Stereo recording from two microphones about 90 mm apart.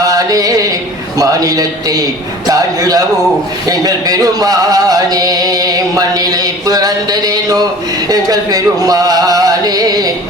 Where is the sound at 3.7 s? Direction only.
45° right (ahead or behind).